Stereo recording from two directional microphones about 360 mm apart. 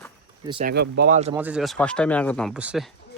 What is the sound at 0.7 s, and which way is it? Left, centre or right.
Speech, right.